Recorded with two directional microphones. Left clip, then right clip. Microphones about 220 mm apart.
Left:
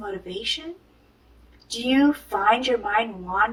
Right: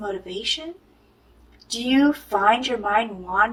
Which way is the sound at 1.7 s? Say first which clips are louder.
Right 1 dB; 25° right (ahead or behind).